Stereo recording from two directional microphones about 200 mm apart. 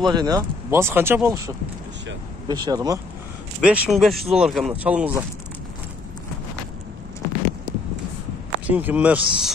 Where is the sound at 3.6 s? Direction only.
5° right (ahead or behind).